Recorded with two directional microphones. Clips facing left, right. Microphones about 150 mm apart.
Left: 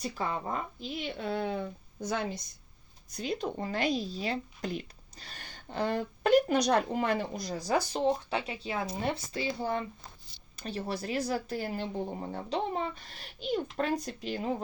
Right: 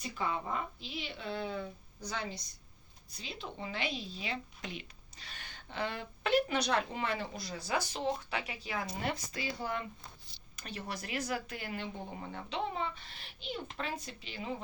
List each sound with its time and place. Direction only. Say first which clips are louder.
0.0 s speech: left 3 dB; 40° left (ahead or behind)